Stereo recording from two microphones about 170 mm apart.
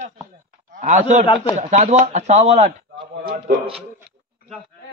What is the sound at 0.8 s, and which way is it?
A man's voice, 45° right (ahead or behind).